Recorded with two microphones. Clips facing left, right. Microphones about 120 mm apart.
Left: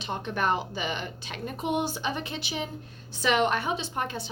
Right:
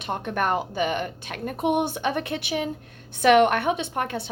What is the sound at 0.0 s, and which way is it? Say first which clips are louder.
A woman's voice: right 3 dB; 55° right (ahead or behind).